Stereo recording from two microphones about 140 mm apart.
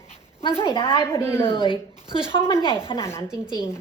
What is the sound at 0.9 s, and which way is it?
Speech, 20° left (ahead or behind).